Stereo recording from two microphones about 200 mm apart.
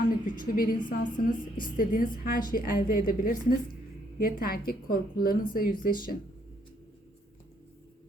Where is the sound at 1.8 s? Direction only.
45° left (ahead or behind).